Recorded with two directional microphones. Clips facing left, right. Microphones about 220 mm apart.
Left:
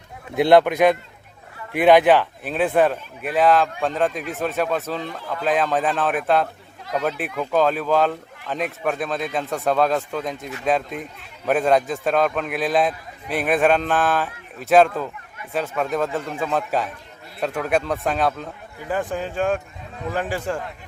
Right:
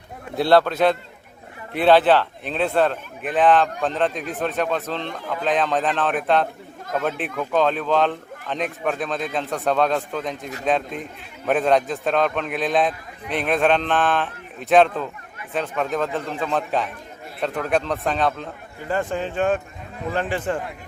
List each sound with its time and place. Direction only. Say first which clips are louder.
0.3 s a man's voice: left 2 dB; 15° left (ahead or behind); by 20.6 s centre (ahead or behind)